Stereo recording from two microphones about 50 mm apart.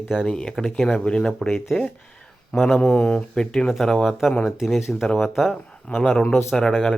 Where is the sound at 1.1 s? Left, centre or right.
Centre.